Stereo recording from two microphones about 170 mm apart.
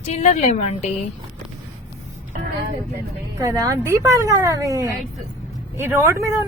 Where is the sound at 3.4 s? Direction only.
20° right (ahead or behind).